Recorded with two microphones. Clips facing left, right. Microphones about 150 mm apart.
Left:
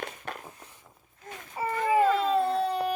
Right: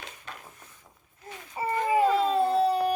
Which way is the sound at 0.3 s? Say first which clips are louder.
Left 2 dB; 55° left (ahead or behind).